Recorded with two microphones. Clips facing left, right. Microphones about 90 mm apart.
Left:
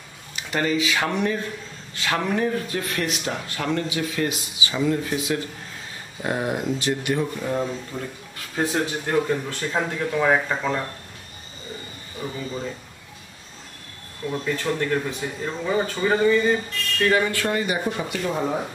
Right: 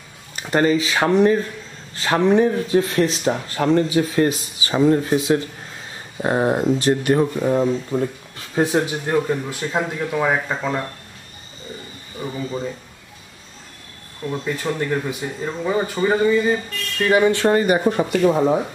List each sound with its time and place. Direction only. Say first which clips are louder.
0.4 s speech: right 6 dB; 40° right (ahead or behind)
7.4 s speech: right 7 dB; 25° right (ahead or behind); by 10.8 s 5° right (ahead or behind)
14.3 s speech: right 1 dB; 10° right (ahead or behind)
17.5 s speech: right 8 dB; 45° right (ahead or behind)